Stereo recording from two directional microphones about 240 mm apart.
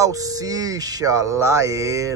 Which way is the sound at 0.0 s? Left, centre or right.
Centre.